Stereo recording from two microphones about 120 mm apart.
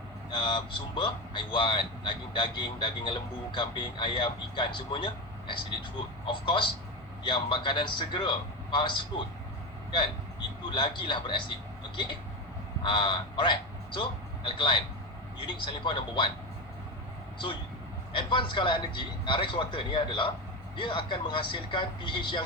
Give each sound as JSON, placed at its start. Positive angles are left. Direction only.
{"t": 0.3, "sound": "a man's voice", "side_deg": 40}
{"t": 10.7, "sound": "a man's voice", "side_deg": 40}
{"t": 12.8, "sound": "a man's voice", "side_deg": 40}
{"t": 17.3, "sound": "a man's voice", "side_deg": 40}